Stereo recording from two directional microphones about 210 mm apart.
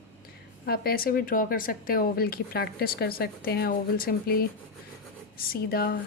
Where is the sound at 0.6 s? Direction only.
45° left (ahead or behind).